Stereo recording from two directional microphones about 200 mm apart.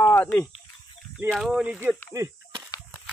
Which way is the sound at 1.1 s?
Centre (ahead or behind).